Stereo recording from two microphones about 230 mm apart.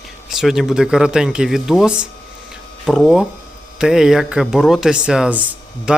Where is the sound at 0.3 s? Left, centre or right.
Centre.